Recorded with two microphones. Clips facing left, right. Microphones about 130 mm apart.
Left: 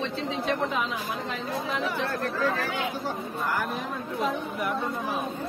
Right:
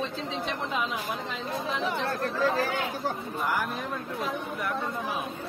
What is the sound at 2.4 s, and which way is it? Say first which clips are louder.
Speech: right 3 dB; 35° right (ahead or behind).